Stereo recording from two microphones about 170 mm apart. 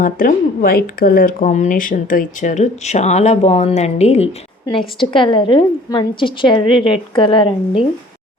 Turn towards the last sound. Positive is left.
turn(degrees=30)  # may be behind; listen again after turning